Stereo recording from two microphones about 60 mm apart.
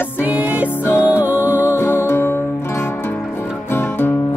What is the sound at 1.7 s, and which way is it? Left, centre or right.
Music, left.